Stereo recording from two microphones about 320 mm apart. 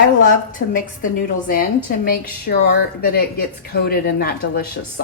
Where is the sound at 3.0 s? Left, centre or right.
Left.